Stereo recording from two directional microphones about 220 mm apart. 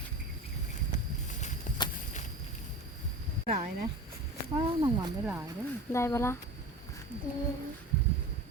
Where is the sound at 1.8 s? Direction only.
20° left (ahead or behind).